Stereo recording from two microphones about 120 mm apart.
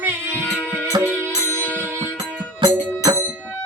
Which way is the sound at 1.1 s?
15° left (ahead or behind).